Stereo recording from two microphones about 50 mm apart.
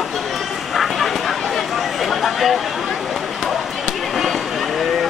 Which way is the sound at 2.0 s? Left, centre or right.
Centre.